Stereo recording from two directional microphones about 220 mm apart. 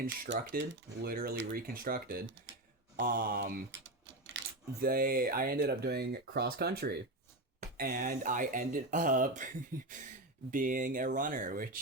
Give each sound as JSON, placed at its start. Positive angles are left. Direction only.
{"t": 0.3, "sound": "speech", "side_deg": -50}
{"t": 3.7, "sound": "typewriter", "side_deg": -55}
{"t": 4.9, "sound": "speech", "side_deg": -40}
{"t": 9.7, "sound": "a sound", "side_deg": -15}
{"t": 10.5, "sound": "speech", "side_deg": -40}